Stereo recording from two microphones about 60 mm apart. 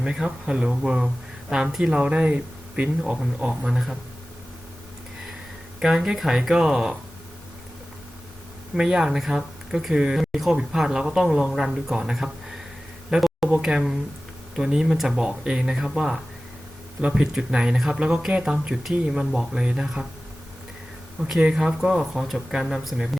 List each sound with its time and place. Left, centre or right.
0.0 s speech: centre
3.1 s speech: centre
5.8 s speech: centre
8.7 s speech: centre
13.1 s a sound: centre
13.6 s speech: centre
17.0 s speech: centre
18.7 s speech: centre
21.5 s speech: centre